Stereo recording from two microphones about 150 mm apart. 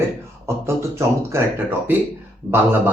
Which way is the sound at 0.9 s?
15° right (ahead or behind).